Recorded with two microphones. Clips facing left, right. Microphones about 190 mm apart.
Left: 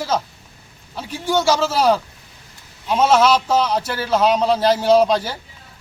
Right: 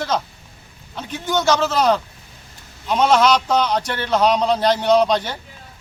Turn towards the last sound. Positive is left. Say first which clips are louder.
# left 1 dB
turn(degrees=5)  # may be behind; listen again after turning